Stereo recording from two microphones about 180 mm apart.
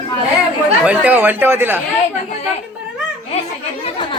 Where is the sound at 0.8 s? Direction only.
10° right (ahead or behind).